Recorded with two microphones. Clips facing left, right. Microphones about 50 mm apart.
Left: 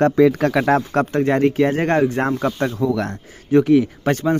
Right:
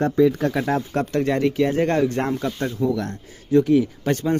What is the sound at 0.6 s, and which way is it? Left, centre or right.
Speech, left.